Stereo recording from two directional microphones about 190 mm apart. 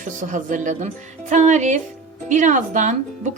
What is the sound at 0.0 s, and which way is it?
Speech, 40° right (ahead or behind).